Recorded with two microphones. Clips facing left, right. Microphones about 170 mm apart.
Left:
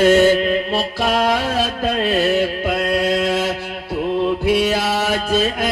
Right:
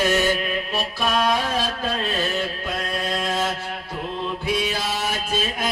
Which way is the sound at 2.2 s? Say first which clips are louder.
Left 9 dB; 65° left (ahead or behind).